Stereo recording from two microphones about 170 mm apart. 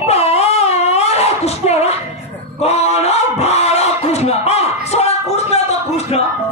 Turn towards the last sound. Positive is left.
turn(degrees=40)  # may be behind; listen again after turning